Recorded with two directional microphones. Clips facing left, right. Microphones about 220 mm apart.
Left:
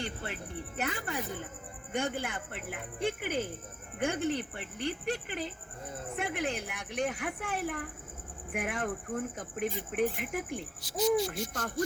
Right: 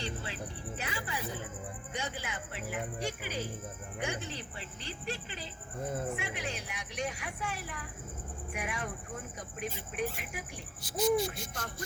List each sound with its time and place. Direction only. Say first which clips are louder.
0.0 s speech: left 1 dB; 55° left (ahead or behind)
10.8 s hoot: left 1 dB; 50° right (ahead or behind)
11.3 s speech: left 5 dB; 50° left (ahead or behind)